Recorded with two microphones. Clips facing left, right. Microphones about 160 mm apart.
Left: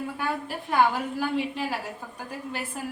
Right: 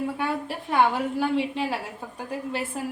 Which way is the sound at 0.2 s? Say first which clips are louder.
Right 2 dB; 25° right (ahead or behind).